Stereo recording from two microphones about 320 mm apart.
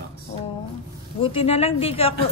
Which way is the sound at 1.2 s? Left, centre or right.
Centre.